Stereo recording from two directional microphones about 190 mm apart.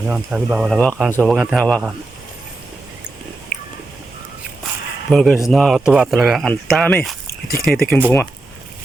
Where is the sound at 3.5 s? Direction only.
50° left (ahead or behind).